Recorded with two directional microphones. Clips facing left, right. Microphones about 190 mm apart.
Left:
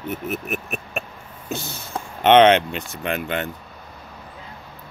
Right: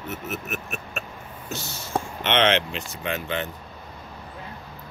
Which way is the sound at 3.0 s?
60° left (ahead or behind).